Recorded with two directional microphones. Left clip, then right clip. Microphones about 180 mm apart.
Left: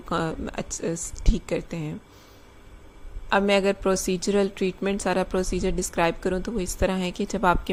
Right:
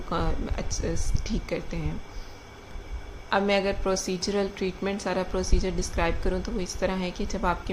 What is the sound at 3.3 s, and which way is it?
A woman's voice, 50° left (ahead or behind).